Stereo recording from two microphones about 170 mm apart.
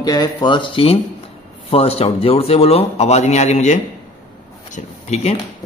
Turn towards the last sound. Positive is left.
turn(degrees=40)  # may be behind; listen again after turning